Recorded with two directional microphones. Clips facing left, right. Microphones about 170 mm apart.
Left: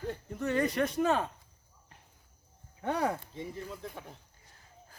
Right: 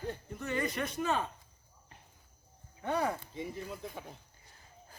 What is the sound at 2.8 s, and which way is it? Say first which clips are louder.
Speech: left 1 dB; 80° left.